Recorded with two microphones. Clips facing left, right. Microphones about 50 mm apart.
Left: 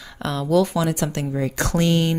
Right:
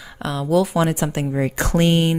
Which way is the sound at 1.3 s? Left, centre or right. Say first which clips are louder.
Right 2 dB; right.